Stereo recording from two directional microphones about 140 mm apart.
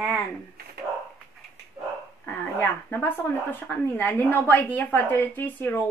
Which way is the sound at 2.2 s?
15° left (ahead or behind).